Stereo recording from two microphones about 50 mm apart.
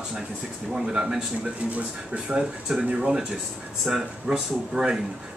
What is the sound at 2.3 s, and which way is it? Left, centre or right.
Speech, centre.